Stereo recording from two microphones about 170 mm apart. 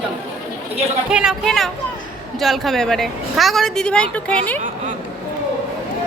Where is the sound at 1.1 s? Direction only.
5° right (ahead or behind).